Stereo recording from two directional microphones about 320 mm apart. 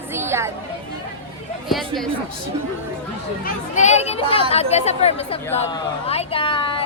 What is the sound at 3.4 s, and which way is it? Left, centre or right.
A child's voice, left.